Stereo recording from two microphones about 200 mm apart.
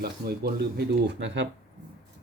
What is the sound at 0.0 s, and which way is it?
Speech, 50° right (ahead or behind).